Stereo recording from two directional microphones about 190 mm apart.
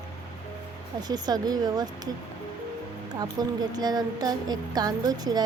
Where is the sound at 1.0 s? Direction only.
20° right (ahead or behind).